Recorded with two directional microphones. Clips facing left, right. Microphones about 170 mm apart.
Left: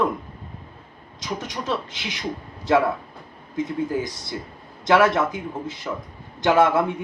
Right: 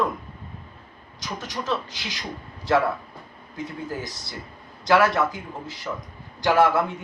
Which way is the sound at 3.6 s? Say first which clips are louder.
Left 7 dB; 20° left (ahead or behind).